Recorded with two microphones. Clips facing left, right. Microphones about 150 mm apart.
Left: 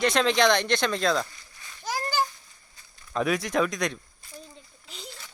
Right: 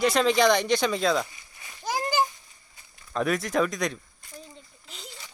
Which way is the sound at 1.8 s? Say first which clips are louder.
Right 2 dB; 15° right (ahead or behind).